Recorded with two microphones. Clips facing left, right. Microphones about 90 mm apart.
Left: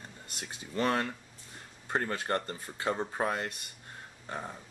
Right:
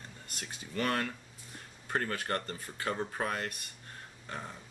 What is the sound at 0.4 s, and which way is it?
Speech, 20° left (ahead or behind).